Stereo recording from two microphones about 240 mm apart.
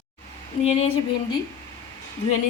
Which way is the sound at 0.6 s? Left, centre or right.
Left.